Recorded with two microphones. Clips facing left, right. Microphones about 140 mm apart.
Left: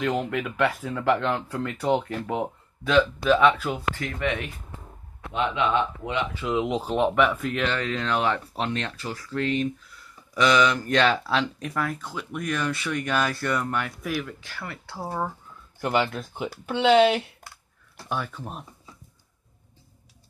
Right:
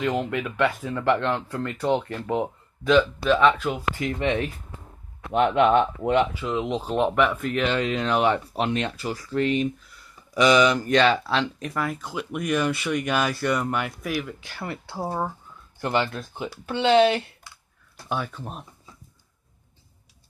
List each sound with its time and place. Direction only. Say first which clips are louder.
0.0 s speech: right 1 dB; centre (ahead or behind)
4.2 s speech: right 4 dB; 30° right (ahead or behind)
5.3 s speech: right 6 dB; 50° right (ahead or behind)
6.4 s speech: left 1 dB; 10° left (ahead or behind)
7.7 s speech: right 3 dB; 15° right (ahead or behind)
14.4 s speech: right 4 dB; 25° right (ahead or behind)
15.8 s speech: even; 5° left (ahead or behind)